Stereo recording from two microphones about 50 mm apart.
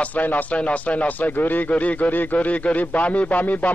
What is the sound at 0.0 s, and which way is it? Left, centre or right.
Speech, left.